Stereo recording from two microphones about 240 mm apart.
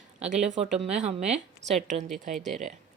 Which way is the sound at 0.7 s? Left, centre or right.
Centre.